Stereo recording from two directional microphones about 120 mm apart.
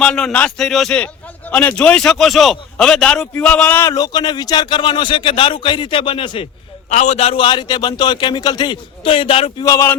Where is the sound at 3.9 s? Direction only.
35° left (ahead or behind).